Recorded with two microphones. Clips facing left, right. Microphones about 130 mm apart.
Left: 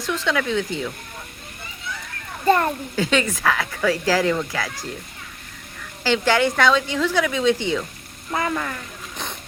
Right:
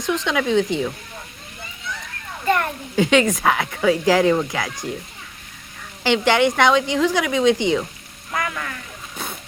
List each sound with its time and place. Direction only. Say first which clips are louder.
0.0 s speech: right 2 dB; 20° right (ahead or behind)
2.5 s frying: left 3 dB; 35° left (ahead or behind)
2.9 s speech: right 9 dB; 15° right (ahead or behind)
6.0 s a woman's voice: right 2 dB; 20° right (ahead or behind)
8.3 s frying: left 3 dB; 30° left (ahead or behind)